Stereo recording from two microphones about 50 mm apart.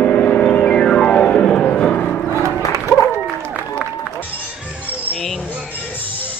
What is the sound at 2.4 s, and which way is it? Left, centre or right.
Music, right.